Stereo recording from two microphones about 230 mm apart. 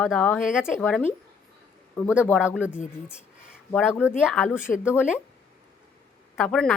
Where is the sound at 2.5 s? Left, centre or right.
Centre.